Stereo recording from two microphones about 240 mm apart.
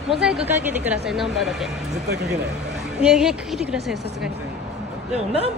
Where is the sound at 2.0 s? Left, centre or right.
Right.